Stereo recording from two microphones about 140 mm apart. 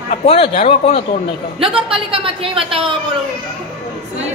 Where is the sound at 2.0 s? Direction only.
40° right (ahead or behind).